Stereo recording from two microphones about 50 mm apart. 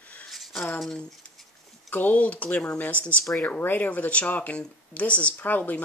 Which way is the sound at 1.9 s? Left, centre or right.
Left.